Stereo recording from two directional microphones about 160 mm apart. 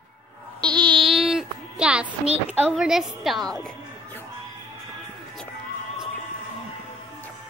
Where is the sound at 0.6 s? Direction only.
30° right (ahead or behind).